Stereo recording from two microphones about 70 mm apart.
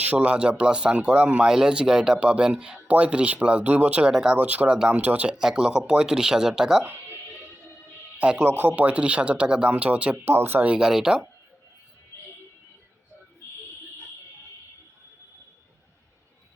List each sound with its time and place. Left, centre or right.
0.0 s speech: centre
4.4 s speech: right
5.3 s speech: centre
8.2 s speech: centre
8.4 s speech: right
10.2 s speech: right
10.7 s speech: centre